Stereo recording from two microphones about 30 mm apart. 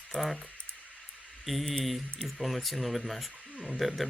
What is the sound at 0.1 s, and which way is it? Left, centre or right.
Speech, centre.